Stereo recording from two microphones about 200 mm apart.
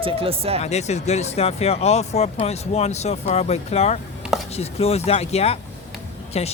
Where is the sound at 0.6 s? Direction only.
35° left (ahead or behind).